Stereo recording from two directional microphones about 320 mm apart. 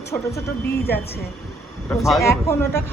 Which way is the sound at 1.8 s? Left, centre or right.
Centre.